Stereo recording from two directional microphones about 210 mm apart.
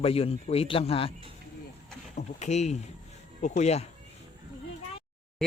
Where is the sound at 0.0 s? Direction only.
30° left (ahead or behind).